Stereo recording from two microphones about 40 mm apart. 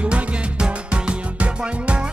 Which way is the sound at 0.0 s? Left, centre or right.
Right.